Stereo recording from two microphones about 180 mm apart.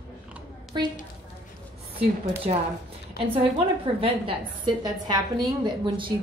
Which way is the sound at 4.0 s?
30° right (ahead or behind).